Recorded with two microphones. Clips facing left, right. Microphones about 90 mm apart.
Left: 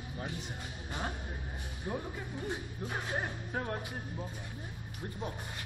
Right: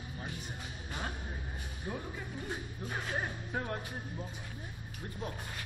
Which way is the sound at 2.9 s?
10° left (ahead or behind).